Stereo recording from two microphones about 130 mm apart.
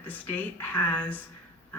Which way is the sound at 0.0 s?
15° left (ahead or behind).